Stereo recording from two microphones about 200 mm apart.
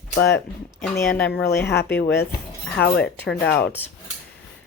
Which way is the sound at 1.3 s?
55° left (ahead or behind).